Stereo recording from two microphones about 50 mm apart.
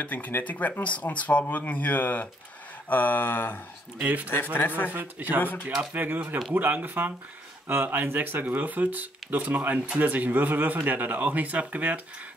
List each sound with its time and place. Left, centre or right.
0.0 s speech: left
4.0 s speech: right
4.6 s speech: left
4.9 s speech: right